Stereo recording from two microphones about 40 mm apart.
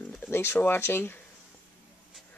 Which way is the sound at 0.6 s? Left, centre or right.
Left.